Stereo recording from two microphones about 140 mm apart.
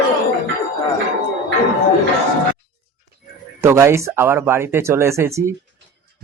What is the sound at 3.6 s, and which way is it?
Speech, 20° right (ahead or behind).